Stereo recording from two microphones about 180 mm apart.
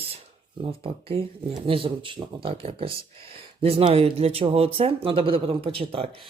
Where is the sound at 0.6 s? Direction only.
30° right (ahead or behind).